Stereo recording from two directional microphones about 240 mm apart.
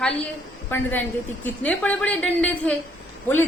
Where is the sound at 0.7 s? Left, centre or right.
Centre.